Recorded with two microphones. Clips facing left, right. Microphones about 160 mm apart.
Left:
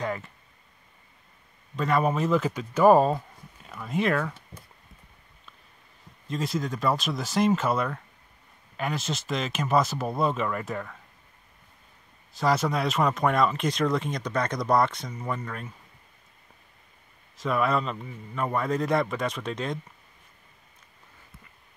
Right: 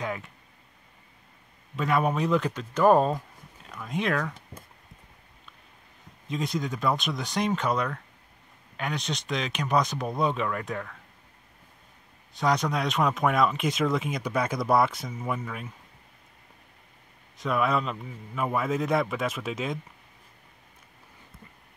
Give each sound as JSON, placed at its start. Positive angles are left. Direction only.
{"t": 0.0, "sound": "speech", "side_deg": 0}
{"t": 1.8, "sound": "speech", "side_deg": 0}
{"t": 6.2, "sound": "speech", "side_deg": 0}
{"t": 12.4, "sound": "speech", "side_deg": 0}
{"t": 17.4, "sound": "speech", "side_deg": 0}